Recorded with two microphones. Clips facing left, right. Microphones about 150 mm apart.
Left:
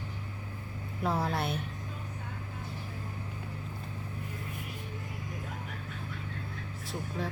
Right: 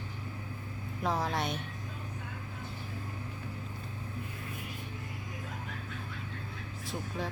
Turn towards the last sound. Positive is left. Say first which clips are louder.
# left 1 dB
turn(degrees=0)  # may be behind; listen again after turning